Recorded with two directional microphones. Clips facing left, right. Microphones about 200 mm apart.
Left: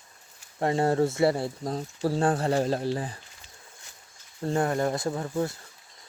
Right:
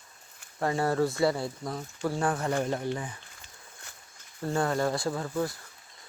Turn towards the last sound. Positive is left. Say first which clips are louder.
# left 2 dB
turn(degrees=25)  # may be behind; listen again after turning